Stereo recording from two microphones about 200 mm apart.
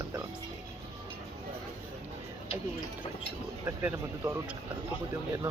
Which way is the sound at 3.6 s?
10° right (ahead or behind).